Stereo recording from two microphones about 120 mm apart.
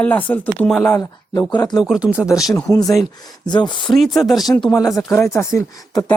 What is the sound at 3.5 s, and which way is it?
Speech, 40° left (ahead or behind).